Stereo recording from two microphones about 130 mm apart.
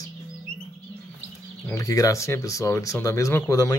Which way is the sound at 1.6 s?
25° left (ahead or behind).